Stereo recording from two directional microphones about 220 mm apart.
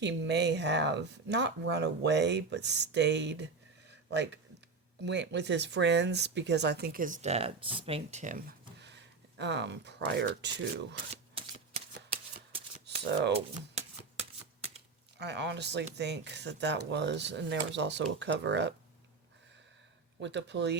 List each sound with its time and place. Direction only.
0.0 s speech: 50° right (ahead or behind)
3.8 s a sound: 50° right (ahead or behind)
5.0 s speech: 50° right (ahead or behind); by 8.5 s 35° right (ahead or behind)
8.8 s a sound: 50° right (ahead or behind)
10.9 s shuffling cards: 25° right (ahead or behind)
15.2 s speech: 50° right (ahead or behind)
20.2 s speech: 50° right (ahead or behind)